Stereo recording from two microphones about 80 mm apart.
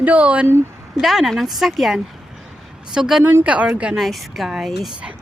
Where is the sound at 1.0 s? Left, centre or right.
Centre.